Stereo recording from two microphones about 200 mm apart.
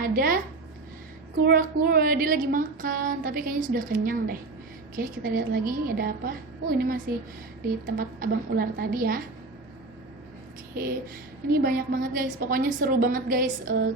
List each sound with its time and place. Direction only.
0.0 s a sound: 45° right (ahead or behind)
1.5 s a woman's voice: 45° right (ahead or behind)
11.6 s a woman's voice: 45° right (ahead or behind)